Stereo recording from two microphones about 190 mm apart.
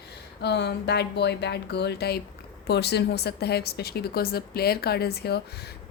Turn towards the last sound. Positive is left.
turn(degrees=60)  # may be behind; listen again after turning